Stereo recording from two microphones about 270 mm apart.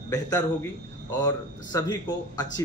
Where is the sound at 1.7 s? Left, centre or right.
Centre.